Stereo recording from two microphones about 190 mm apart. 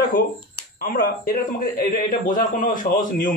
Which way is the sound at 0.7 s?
50° left (ahead or behind).